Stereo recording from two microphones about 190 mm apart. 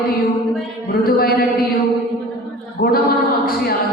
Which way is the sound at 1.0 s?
55° left (ahead or behind).